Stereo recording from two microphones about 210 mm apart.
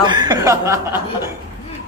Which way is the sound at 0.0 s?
20° right (ahead or behind).